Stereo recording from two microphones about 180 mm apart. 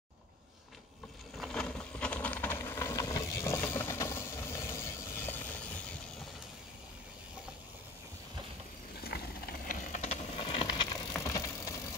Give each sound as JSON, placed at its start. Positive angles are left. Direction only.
{"t": 1.4, "sound": "vehicle", "side_deg": 5}
{"t": 9.0, "sound": "vehicle", "side_deg": 60}
{"t": 11.1, "sound": "vehicle", "side_deg": 15}